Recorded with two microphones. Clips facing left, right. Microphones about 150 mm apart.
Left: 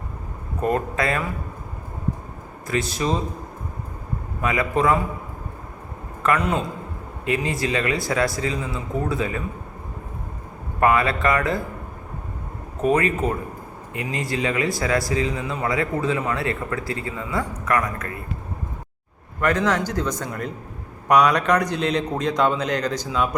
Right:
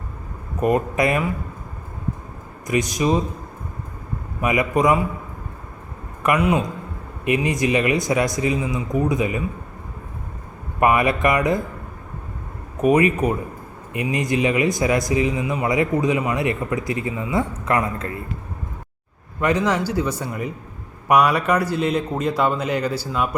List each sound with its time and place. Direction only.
0.6 s speech: 15° right (ahead or behind)
2.6 s speech: 15° right (ahead or behind)
4.4 s speech: 15° right (ahead or behind)
6.2 s speech: 10° right (ahead or behind)
10.8 s speech: 15° right (ahead or behind)
12.8 s a man's voice: 15° right (ahead or behind)
19.4 s a man's voice: 15° right (ahead or behind)